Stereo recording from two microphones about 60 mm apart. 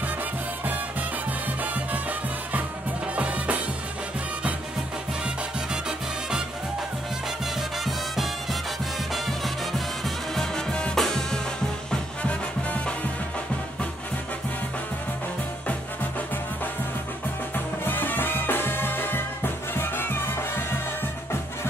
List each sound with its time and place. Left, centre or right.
3.2 s music: right
10.3 s music: centre
11.9 s music: left
17.8 s music: left